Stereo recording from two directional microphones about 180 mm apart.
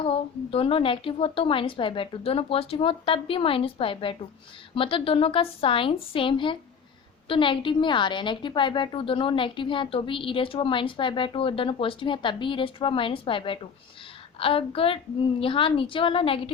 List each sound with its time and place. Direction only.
0.0 s a woman's voice: 30° left (ahead or behind)